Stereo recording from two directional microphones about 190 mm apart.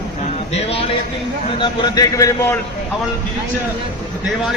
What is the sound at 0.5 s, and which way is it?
A man's voice, 30° left (ahead or behind).